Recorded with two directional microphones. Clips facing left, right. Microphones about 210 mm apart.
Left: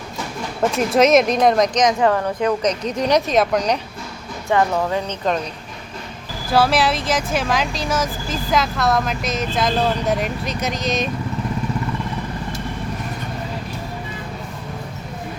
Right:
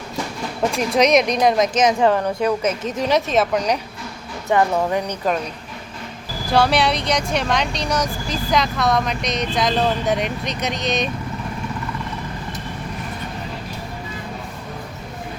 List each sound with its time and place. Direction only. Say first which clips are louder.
0.9 s speech: left 2 dB; centre (ahead or behind); by 2.7 s 15° right (ahead or behind)
2.8 s speech: left 1 dB; centre (ahead or behind)
4.4 s speech: even; 20° right (ahead or behind)
6.5 s speech: even; centre (ahead or behind)